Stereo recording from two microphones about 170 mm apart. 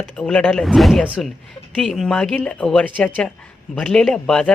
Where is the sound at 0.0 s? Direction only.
5° left (ahead or behind).